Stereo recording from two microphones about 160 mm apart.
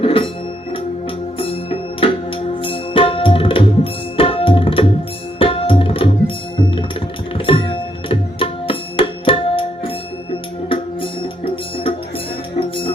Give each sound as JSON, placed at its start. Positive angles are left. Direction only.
{"t": 0.0, "sound": "music", "side_deg": 35}
{"t": 1.4, "sound": "music", "side_deg": 35}
{"t": 4.2, "sound": "tabla", "side_deg": 35}
{"t": 10.7, "sound": "music", "side_deg": 35}